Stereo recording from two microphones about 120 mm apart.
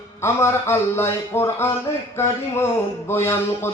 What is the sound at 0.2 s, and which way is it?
A man's voice, 20° left (ahead or behind).